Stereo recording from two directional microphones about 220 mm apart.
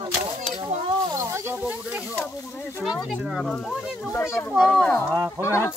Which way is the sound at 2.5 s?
10° left (ahead or behind).